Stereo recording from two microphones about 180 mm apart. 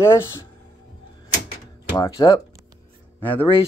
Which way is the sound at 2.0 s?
20° left (ahead or behind).